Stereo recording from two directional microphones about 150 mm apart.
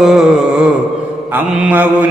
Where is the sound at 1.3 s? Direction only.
10° right (ahead or behind).